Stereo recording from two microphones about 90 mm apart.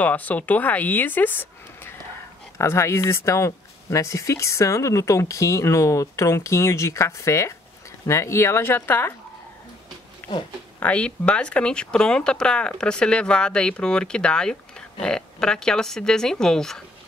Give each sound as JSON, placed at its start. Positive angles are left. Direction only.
{"t": 0.0, "sound": "speech", "side_deg": 15}
{"t": 10.2, "sound": "pig", "side_deg": 25}
{"t": 10.8, "sound": "speech", "side_deg": 15}